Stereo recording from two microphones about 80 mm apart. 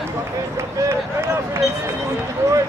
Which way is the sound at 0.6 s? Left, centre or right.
Right.